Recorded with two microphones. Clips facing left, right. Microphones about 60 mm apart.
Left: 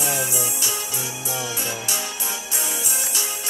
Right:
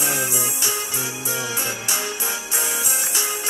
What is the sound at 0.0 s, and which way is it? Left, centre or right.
Music, centre.